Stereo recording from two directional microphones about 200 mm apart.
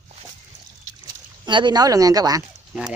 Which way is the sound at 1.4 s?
20° right (ahead or behind).